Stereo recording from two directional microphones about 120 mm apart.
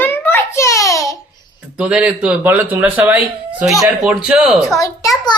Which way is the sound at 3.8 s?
5° right (ahead or behind).